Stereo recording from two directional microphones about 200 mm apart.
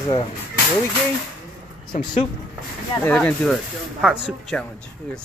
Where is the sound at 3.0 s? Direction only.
5° left (ahead or behind).